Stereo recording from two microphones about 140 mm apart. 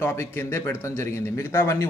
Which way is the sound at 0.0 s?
15° left (ahead or behind).